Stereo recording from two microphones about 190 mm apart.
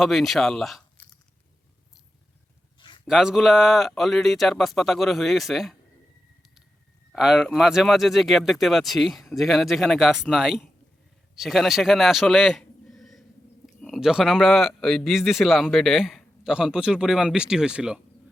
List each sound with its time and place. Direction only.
0.0 s a man's voice: centre (ahead or behind)
2.7 s a sound: 25° left (ahead or behind)
3.1 s a man's voice: 5° right (ahead or behind)
7.1 s a man's voice: 5° right (ahead or behind)